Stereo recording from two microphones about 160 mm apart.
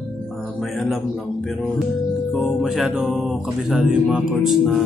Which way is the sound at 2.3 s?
Centre (ahead or behind).